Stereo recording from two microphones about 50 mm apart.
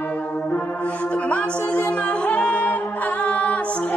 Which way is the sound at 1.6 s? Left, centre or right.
Left.